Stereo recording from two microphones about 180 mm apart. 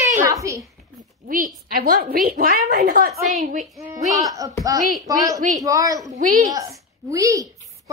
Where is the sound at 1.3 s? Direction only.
55° right (ahead or behind).